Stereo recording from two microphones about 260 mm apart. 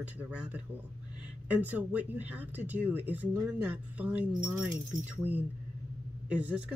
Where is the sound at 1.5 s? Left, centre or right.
Centre.